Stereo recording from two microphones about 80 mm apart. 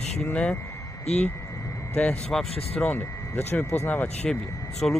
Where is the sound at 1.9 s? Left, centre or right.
Centre.